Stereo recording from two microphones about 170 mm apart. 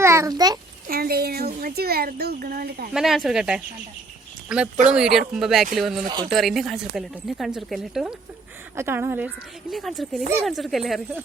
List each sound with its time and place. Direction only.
0.0 s a sound: 15° right (ahead or behind)
0.9 s speech: 60° right (ahead or behind)
2.9 s speech: centre (ahead or behind)
8.7 s speech: 15° right (ahead or behind)